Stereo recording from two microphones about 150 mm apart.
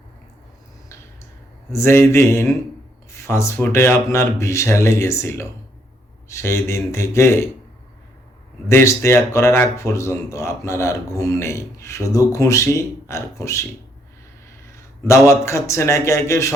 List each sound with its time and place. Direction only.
1.7 s speech: 15° left (ahead or behind)
8.6 s speech: 15° left (ahead or behind)
15.3 s speech: 20° left (ahead or behind)